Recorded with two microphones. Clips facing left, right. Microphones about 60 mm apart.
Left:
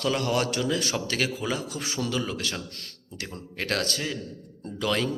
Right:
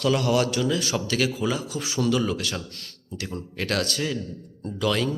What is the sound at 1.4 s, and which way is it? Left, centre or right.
Speech, centre.